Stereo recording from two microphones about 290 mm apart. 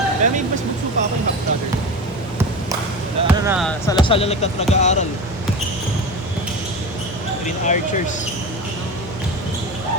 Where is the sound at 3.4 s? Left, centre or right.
Centre.